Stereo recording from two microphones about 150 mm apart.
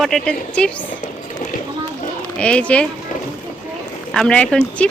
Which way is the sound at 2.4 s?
10° left (ahead or behind).